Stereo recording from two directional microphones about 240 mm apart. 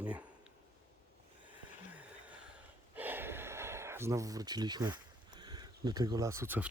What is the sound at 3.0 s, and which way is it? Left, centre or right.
Gasp, centre.